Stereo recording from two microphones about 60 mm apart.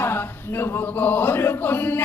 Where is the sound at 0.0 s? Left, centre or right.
Left.